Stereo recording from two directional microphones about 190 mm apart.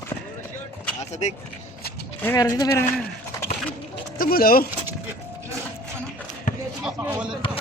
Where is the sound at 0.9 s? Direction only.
35° left (ahead or behind).